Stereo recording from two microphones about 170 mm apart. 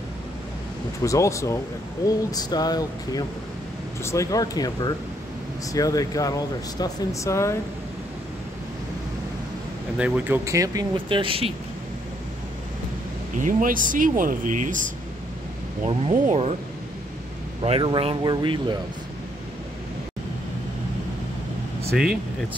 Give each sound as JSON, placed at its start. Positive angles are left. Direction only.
{"t": 1.0, "sound": "speech", "side_deg": 20}
{"t": 9.9, "sound": "speech", "side_deg": -5}
{"t": 13.4, "sound": "speech", "side_deg": -50}
{"t": 15.8, "sound": "speech", "side_deg": -40}
{"t": 17.6, "sound": "speech", "side_deg": -30}
{"t": 21.9, "sound": "speech", "side_deg": -5}